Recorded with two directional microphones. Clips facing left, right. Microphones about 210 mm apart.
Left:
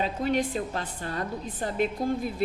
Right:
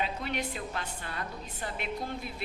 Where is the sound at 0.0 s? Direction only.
40° left (ahead or behind).